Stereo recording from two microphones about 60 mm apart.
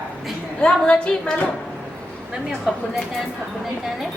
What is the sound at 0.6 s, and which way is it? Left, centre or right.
Speech, centre.